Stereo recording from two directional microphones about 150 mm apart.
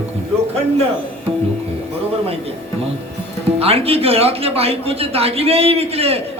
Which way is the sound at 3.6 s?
40° right (ahead or behind).